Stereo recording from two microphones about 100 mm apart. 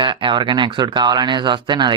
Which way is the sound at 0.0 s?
55° right (ahead or behind).